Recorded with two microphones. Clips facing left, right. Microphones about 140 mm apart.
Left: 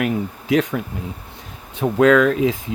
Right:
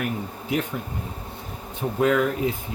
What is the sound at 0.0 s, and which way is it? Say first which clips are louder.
Speech: left 7 dB; 90° left.